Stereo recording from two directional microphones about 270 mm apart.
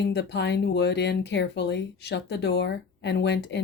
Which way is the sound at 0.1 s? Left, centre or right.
Left.